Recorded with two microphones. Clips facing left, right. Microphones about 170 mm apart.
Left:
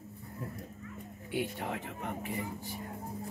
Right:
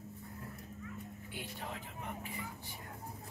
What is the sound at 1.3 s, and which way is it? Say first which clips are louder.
Speech: left 11 dB; 70° left (ahead or behind).